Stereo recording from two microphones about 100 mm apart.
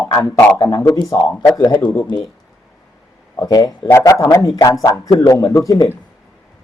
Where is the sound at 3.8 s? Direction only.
25° left (ahead or behind).